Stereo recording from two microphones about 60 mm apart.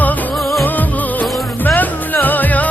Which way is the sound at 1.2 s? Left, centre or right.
Left.